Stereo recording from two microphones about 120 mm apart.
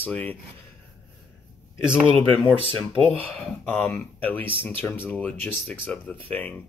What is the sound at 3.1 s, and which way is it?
Speech, 15° left (ahead or behind).